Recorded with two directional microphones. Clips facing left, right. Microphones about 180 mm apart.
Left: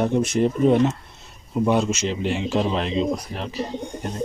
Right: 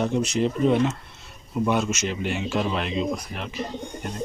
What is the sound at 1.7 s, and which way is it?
Speech, 30° left (ahead or behind).